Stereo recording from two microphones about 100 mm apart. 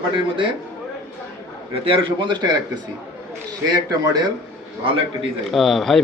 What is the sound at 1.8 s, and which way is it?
Speech, 65° right (ahead or behind).